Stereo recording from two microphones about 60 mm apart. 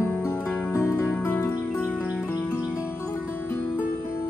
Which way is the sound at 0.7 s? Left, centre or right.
Left.